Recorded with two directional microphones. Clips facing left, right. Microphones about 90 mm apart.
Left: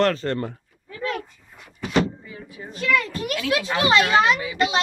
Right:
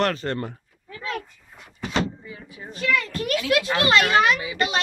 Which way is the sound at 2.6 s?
5° left (ahead or behind).